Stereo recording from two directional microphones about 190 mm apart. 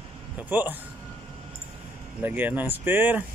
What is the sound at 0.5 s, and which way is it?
Speech, 10° right (ahead or behind).